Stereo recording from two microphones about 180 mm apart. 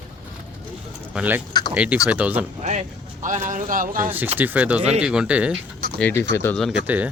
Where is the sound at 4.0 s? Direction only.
10° right (ahead or behind).